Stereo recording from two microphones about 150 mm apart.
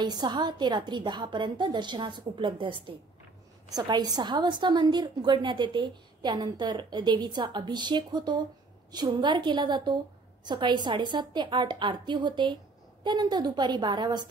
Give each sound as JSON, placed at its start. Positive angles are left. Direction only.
{"t": 0.0, "sound": "a woman's voice", "side_deg": -30}